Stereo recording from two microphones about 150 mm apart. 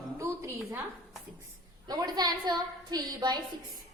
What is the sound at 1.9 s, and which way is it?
A woman's voice, 25° right (ahead or behind).